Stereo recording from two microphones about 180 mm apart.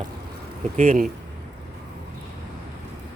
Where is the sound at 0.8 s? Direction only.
45° right (ahead or behind).